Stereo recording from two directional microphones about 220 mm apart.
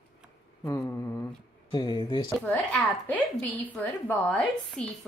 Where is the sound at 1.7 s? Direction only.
20° left (ahead or behind).